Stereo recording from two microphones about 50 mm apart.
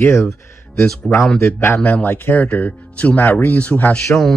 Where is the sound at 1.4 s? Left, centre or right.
Left.